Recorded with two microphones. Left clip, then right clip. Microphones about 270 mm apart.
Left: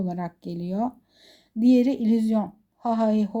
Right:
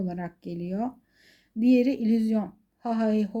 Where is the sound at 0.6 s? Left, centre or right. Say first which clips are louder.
Left 5 dB; centre.